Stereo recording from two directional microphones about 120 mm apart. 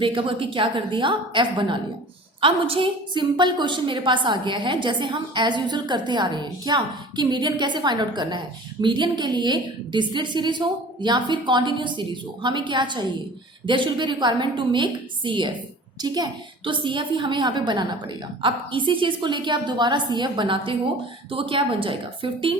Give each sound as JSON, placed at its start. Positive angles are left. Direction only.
{"t": 0.0, "sound": "a woman's voice", "side_deg": -45}